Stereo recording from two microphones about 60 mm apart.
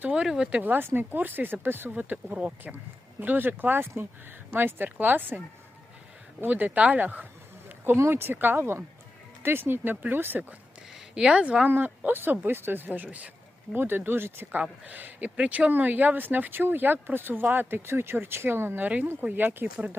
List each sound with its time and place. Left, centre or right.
0.1 s speech: centre
0.6 s speech: right
2.0 s speech: right
6.4 s speech: right
7.9 s speech: right
10.9 s a sound: centre
11.7 s speech: right
14.6 s speech: right